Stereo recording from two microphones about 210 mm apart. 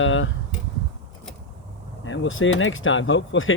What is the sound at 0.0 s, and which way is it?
Speech, 70° left (ahead or behind).